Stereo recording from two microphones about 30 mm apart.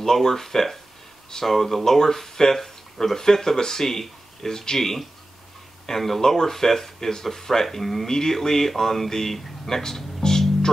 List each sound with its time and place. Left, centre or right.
0.0 s speech: centre